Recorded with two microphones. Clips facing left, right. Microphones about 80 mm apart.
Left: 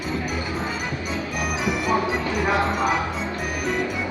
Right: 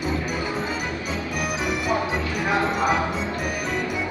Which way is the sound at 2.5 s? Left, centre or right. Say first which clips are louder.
Right 2 dB; centre.